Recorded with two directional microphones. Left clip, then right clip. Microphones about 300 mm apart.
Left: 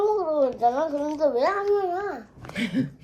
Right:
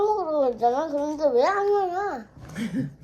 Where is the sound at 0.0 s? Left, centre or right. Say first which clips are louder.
Even; centre.